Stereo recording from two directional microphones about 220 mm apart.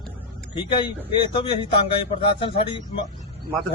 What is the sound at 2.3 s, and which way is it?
Speech, 25° left (ahead or behind).